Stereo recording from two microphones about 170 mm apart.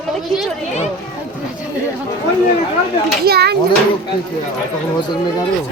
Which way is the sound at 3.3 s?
70° right (ahead or behind).